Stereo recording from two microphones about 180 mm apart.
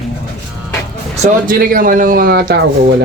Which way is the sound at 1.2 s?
50° right (ahead or behind).